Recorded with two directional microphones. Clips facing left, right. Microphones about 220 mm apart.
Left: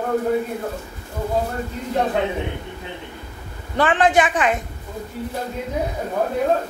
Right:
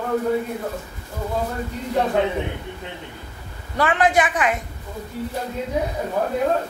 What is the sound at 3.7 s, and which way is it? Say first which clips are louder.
Speech: left 2 dB; 30° left (ahead or behind).